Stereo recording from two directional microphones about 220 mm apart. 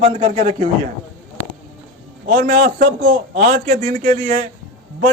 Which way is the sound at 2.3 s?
40° right (ahead or behind).